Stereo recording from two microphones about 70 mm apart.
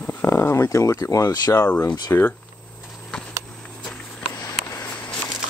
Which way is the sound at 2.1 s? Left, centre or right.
Left.